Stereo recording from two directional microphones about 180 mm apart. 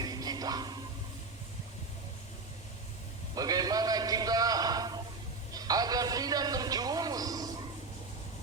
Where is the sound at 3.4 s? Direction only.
20° right (ahead or behind).